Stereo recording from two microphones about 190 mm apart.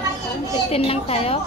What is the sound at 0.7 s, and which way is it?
Speech, 30° left (ahead or behind).